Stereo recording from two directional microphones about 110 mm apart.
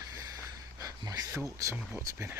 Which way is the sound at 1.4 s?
30° right (ahead or behind).